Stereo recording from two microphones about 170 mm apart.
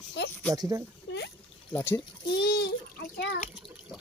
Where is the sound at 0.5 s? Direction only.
20° right (ahead or behind).